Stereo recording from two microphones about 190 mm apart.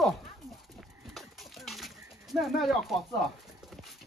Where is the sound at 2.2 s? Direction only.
Centre (ahead or behind).